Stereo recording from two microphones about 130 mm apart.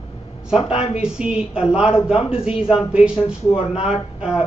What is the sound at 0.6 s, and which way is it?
Speech, 50° left (ahead or behind).